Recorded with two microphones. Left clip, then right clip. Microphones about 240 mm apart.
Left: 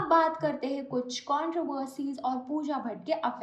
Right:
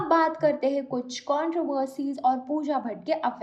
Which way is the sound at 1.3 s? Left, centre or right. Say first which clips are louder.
Right 4 dB; centre.